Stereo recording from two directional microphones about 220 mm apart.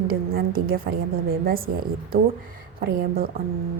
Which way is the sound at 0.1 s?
40° right (ahead or behind).